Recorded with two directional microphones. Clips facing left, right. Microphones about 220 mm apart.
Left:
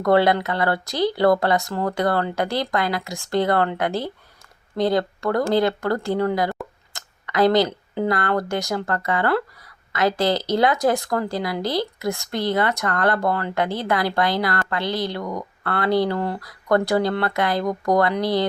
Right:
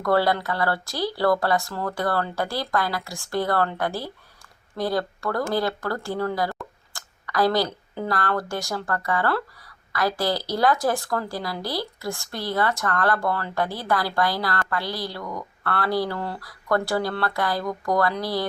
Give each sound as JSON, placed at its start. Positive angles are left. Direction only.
{"t": 0.0, "sound": "speech", "side_deg": 20}